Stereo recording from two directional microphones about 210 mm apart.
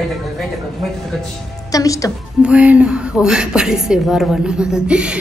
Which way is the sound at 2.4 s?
5° right (ahead or behind).